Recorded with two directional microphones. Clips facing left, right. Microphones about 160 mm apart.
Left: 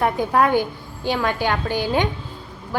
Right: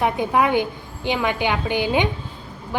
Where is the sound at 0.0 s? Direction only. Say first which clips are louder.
Left 1 dB; 10° right (ahead or behind).